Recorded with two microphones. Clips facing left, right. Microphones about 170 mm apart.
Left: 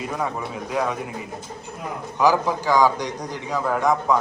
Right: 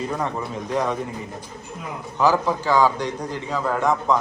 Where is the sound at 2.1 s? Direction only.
15° left (ahead or behind).